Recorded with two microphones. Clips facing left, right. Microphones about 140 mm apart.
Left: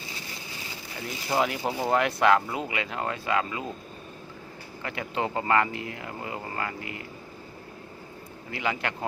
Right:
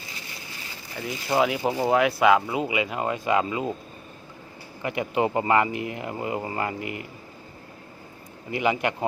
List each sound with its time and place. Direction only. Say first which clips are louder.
1.0 s speech: right 4 dB; 5° right (ahead or behind); by 3.7 s 20° right (ahead or behind)
4.8 s speech: right 6 dB; 15° right (ahead or behind)
8.4 s speech: right 6 dB; 15° right (ahead or behind)